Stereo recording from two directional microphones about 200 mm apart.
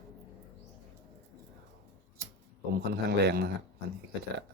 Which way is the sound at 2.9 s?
50° right (ahead or behind).